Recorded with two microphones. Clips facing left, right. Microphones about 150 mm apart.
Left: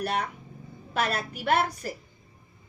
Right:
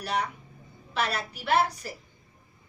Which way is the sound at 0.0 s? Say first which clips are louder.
Left 1 dB; 50° left (ahead or behind).